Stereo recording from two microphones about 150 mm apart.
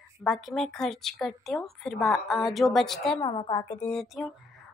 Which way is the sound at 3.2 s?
35° left (ahead or behind).